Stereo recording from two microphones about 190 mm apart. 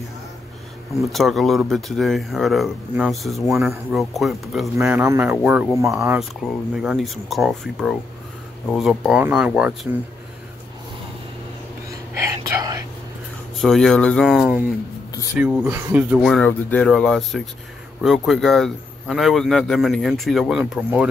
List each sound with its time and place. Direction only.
1.1 s a man's voice: centre (ahead or behind)
4.7 s speech: 10° right (ahead or behind)
6.1 s a man's voice: centre (ahead or behind)
12.2 s whispering: 15° right (ahead or behind)
13.6 s a man's voice: centre (ahead or behind)
16.2 s a man's voice: centre (ahead or behind)